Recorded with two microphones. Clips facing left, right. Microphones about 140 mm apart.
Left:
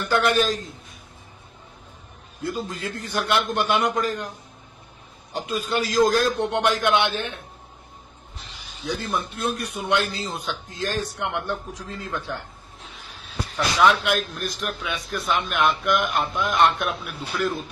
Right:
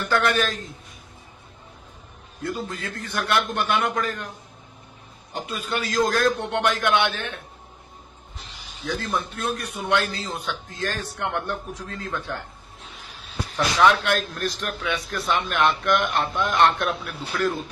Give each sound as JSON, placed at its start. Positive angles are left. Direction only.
{"t": 0.1, "sound": "a man's voice", "side_deg": 15}
{"t": 2.4, "sound": "a man's voice", "side_deg": 25}
{"t": 5.7, "sound": "a man's voice", "side_deg": 30}
{"t": 6.0, "sound": "a man's voice", "side_deg": 20}
{"t": 8.8, "sound": "a man's voice", "side_deg": 10}
{"t": 13.7, "sound": "a man's voice", "side_deg": 5}